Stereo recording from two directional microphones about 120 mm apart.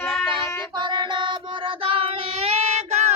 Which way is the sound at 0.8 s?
40° right (ahead or behind).